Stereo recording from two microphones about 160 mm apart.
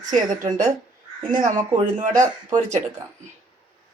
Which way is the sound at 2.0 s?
50° right (ahead or behind).